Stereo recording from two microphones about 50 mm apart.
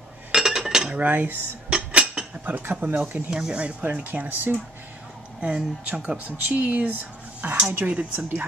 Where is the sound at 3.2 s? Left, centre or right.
Centre.